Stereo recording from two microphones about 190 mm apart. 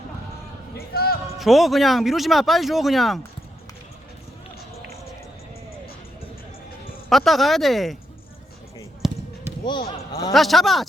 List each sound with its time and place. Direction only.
0.8 s speech: 55° left (ahead or behind)
1.4 s speech: centre (ahead or behind)
7.1 s speech: centre (ahead or behind)
9.0 s basketball bounce: centre (ahead or behind)
10.3 s speech: centre (ahead or behind)